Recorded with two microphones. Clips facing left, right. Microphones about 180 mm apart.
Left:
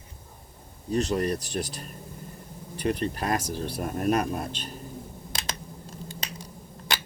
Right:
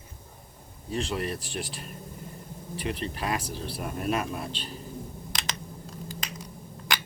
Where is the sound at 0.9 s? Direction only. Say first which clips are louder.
Left 5 dB; 40° left (ahead or behind).